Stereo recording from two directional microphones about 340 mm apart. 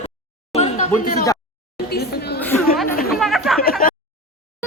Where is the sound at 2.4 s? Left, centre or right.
Centre.